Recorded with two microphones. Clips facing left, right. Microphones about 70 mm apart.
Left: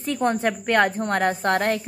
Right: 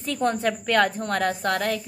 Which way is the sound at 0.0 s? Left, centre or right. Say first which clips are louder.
Left 2 dB; left.